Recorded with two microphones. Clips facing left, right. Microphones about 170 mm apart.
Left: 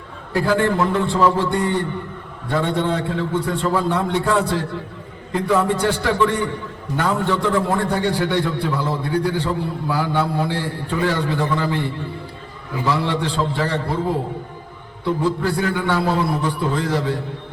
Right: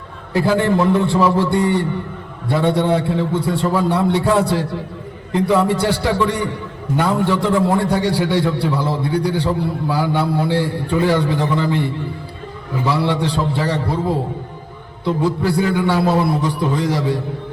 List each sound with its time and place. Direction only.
0.3 s a man's voice: 15° right (ahead or behind)
15.0 s a man's voice: 15° right (ahead or behind)